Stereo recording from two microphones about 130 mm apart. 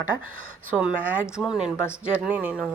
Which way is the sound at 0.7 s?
10° right (ahead or behind).